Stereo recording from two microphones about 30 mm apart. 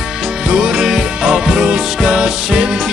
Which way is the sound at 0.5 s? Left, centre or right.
Right.